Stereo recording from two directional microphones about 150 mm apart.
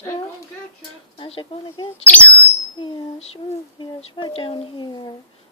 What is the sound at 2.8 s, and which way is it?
Speech, 35° left (ahead or behind).